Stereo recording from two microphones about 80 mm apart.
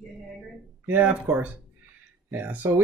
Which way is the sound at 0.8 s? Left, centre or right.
Right.